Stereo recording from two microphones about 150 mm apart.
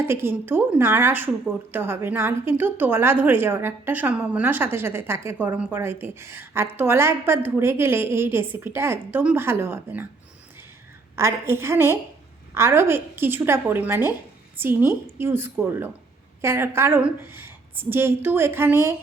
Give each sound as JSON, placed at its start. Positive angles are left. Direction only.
{"t": 0.0, "sound": "a woman's voice", "side_deg": -15}
{"t": 11.2, "sound": "a woman's voice", "side_deg": -15}